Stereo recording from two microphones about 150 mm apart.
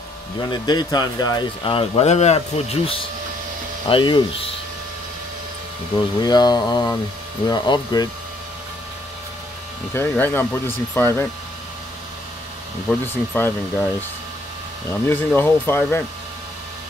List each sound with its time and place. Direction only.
0.4 s speech: 30° left (ahead or behind)
6.2 s speech: 25° left (ahead or behind)
9.9 s speech: 15° left (ahead or behind)
13.0 s speech: 15° left (ahead or behind)
14.9 s speech: 15° left (ahead or behind)